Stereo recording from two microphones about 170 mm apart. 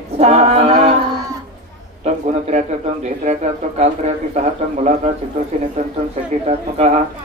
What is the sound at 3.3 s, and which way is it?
Speech, 40° right (ahead or behind).